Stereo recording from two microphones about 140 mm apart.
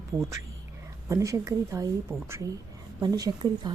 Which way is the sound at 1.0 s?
25° right (ahead or behind).